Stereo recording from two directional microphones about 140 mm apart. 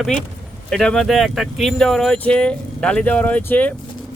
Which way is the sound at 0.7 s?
5° left (ahead or behind).